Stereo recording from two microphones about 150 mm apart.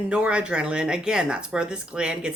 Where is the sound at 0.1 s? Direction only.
5° right (ahead or behind).